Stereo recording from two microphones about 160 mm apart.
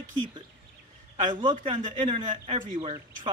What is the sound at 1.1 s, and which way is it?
A man's voice, 30° right (ahead or behind).